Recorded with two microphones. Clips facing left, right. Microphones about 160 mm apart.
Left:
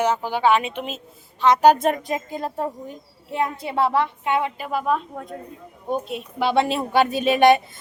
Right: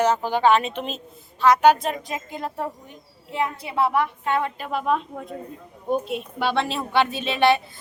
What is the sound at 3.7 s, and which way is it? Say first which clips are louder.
Speech: left 1 dB; 30° left (ahead or behind).